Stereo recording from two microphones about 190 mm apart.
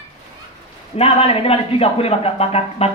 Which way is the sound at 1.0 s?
30° left (ahead or behind).